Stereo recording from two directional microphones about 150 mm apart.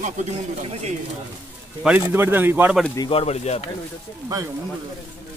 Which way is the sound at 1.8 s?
10° right (ahead or behind).